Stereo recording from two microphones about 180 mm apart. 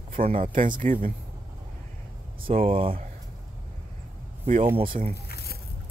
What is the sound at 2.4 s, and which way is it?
Speech, 30° right (ahead or behind).